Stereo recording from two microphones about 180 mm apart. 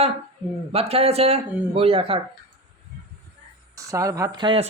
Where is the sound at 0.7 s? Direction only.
35° right (ahead or behind).